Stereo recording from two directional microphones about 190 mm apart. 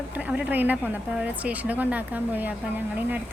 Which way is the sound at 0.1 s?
5° right (ahead or behind).